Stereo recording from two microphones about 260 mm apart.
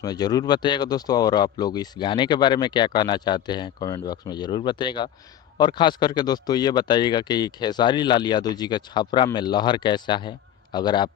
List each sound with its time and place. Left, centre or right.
0.0 s speech: centre